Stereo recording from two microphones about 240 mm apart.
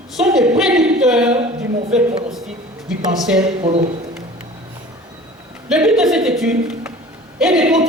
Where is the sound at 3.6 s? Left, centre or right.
Right.